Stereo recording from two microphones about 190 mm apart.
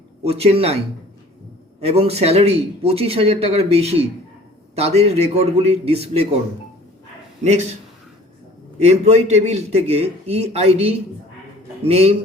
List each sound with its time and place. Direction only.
0.2 s a man's voice: 30° right (ahead or behind)
1.8 s a man's voice: 30° right (ahead or behind)
7.4 s a man's voice: 35° right (ahead or behind)
8.8 s a man's voice: 35° right (ahead or behind)